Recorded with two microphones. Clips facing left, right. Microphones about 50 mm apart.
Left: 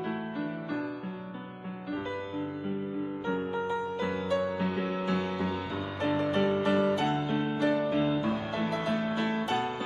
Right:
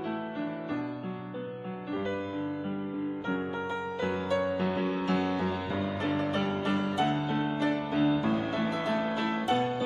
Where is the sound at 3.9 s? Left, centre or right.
Right.